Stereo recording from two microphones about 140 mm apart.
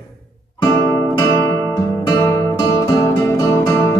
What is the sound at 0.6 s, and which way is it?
Music, 25° left (ahead or behind).